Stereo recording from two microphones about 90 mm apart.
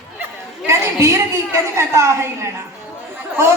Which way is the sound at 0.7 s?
30° right (ahead or behind).